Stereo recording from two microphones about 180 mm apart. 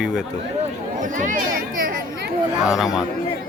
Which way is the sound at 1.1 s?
50° right (ahead or behind).